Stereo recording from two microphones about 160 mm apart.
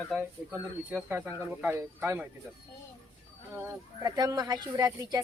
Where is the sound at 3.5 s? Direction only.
15° right (ahead or behind).